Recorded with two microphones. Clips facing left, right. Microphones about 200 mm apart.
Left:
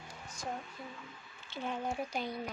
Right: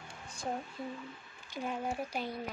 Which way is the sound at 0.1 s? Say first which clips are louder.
Right 2 dB; 30° right (ahead or behind).